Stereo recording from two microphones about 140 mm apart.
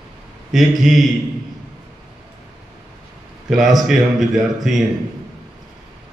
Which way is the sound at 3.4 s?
Centre (ahead or behind).